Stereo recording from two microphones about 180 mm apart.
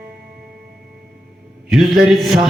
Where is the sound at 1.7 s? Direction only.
Centre (ahead or behind).